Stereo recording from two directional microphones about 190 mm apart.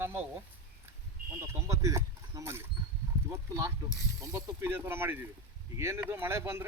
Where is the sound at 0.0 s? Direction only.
10° right (ahead or behind).